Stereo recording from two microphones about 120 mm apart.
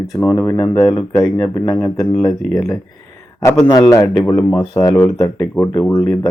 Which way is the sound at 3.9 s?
35° left (ahead or behind).